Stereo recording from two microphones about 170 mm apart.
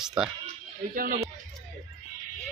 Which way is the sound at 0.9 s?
55° right (ahead or behind).